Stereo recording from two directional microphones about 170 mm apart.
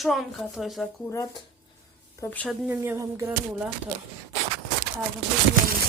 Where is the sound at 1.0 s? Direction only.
20° left (ahead or behind).